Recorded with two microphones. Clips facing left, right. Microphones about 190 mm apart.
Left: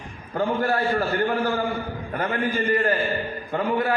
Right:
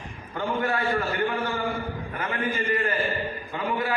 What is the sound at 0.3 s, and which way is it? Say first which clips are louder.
Speech: left 4 dB; 35° left (ahead or behind).